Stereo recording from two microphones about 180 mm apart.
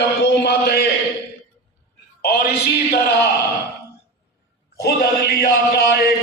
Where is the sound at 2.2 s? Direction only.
60° left (ahead or behind).